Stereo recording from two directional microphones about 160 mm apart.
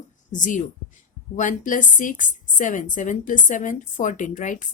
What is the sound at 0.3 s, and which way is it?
A woman's voice, 50° left (ahead or behind).